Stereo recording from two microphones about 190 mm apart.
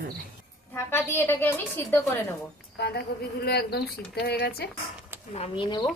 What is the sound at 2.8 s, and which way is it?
Speech, 55° left (ahead or behind).